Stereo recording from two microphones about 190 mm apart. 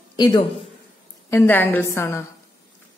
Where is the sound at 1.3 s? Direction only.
10° left (ahead or behind).